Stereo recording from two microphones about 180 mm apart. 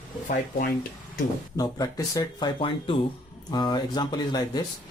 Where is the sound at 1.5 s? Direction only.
20° left (ahead or behind).